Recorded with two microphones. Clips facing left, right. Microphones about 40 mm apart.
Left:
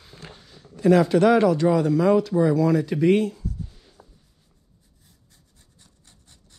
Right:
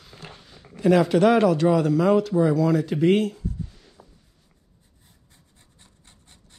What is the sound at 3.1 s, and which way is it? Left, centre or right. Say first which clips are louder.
Speech: even; right.